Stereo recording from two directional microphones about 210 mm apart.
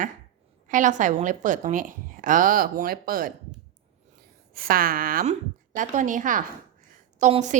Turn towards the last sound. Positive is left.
turn(degrees=-35)  # may be behind; listen again after turning